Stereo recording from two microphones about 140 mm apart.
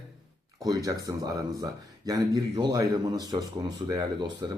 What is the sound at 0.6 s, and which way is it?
Speech, 25° right (ahead or behind).